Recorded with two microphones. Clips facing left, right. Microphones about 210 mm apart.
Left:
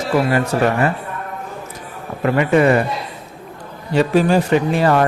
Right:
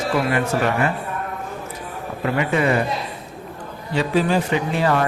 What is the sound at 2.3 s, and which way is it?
Speech, 50° left (ahead or behind).